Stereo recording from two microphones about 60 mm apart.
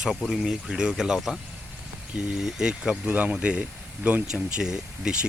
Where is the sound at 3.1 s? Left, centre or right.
Right.